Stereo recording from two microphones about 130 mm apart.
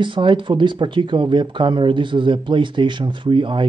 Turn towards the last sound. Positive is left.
turn(degrees=-40)  # may be behind; listen again after turning